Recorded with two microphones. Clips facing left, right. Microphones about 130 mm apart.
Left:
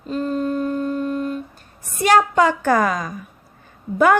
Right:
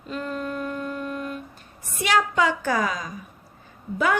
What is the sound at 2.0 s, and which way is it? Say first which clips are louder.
A woman's voice: left 6 dB; 45° left (ahead or behind).